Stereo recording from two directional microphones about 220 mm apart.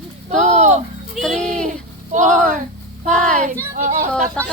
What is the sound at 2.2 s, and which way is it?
Speech, 5° left (ahead or behind).